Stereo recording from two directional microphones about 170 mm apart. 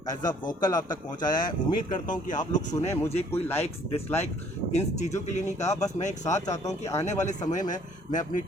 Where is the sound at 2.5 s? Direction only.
45° left (ahead or behind).